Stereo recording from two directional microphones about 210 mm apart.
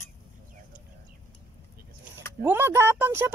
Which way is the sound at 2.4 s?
10° right (ahead or behind).